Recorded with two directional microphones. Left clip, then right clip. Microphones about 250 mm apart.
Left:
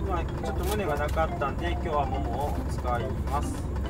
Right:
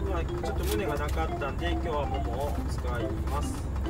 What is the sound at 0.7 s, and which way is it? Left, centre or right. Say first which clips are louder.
Speech: left 5 dB; centre.